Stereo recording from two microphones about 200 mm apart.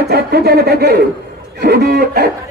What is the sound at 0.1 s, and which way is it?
A man's voice, 50° right (ahead or behind).